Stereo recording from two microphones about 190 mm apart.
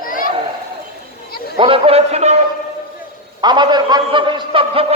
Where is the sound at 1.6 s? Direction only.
30° right (ahead or behind).